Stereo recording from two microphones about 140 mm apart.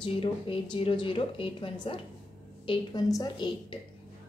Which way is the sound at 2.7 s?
25° left (ahead or behind).